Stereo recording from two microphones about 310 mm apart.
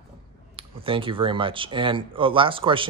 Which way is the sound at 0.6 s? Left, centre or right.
Centre.